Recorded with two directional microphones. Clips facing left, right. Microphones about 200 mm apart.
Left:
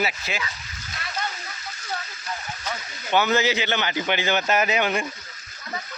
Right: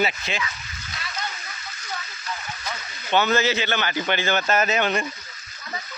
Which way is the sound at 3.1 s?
15° left (ahead or behind).